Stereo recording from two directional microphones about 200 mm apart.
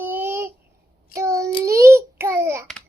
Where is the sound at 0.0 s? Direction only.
10° right (ahead or behind).